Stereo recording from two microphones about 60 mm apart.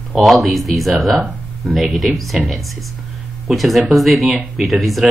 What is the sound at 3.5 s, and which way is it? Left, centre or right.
Speech, centre.